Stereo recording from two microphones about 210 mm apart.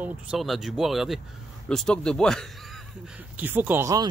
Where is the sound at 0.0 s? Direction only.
Centre (ahead or behind).